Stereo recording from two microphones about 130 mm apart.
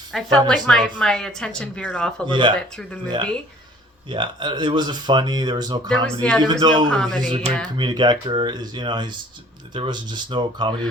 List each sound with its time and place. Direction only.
0.1 s speech: 5° left (ahead or behind)
2.2 s speech: 40° right (ahead or behind)
2.6 s speech: 5° left (ahead or behind)
4.1 s speech: 40° right (ahead or behind)
5.9 s speech: 10° left (ahead or behind)
6.4 s speech: 35° right (ahead or behind)
6.9 s speech: 5° left (ahead or behind)
7.3 s speech: 45° right (ahead or behind)
7.8 s speech: 35° right (ahead or behind)